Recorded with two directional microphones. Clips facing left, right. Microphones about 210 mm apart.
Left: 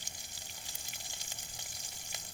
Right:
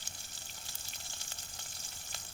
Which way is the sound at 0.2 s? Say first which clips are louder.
Left 1 dB; 15° left (ahead or behind).